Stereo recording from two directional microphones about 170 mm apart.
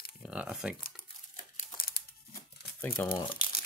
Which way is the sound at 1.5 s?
60° left (ahead or behind).